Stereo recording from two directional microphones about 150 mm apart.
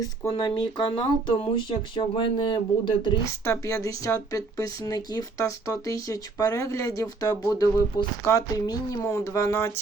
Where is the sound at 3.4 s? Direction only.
20° left (ahead or behind).